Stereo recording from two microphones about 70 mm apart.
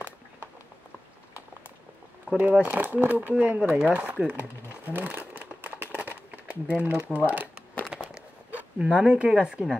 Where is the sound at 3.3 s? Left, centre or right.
Centre.